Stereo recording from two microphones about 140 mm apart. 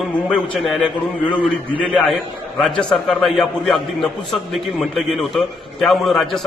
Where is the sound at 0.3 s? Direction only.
Centre (ahead or behind).